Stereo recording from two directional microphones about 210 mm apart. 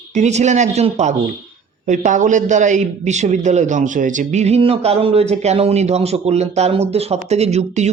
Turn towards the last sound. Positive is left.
turn(degrees=-30)  # may be behind; listen again after turning